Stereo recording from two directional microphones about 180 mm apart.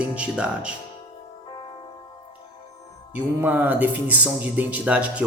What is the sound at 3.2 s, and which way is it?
Speech, 10° right (ahead or behind).